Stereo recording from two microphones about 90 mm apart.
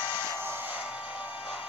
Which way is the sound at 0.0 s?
60° left (ahead or behind).